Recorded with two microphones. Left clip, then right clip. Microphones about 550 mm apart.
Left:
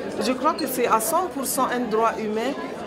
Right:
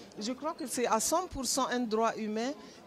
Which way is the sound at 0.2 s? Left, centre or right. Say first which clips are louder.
Left 14 dB; right.